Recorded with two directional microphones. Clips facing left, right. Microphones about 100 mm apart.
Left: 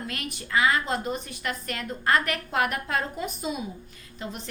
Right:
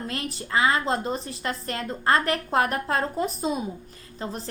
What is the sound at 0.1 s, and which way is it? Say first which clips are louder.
A woman's voice: right 1 dB; 30° right (ahead or behind).